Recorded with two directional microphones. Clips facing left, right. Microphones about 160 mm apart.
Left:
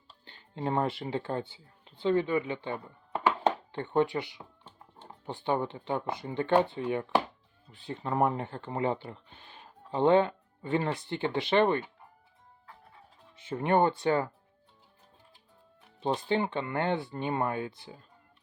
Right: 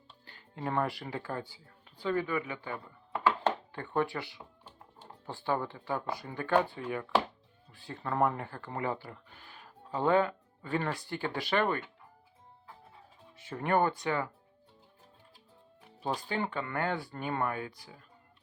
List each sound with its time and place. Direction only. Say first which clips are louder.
0.3 s speech: left 4 dB; 25° left (ahead or behind)
13.3 s speech: left 3 dB; 20° left (ahead or behind)
16.0 s speech: left 5 dB; 25° left (ahead or behind)